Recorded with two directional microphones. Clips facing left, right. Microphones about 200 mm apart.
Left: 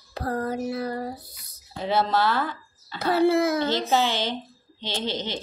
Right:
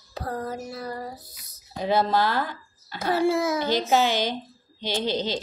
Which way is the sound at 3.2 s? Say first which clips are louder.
Left 3 dB; 60° left (ahead or behind).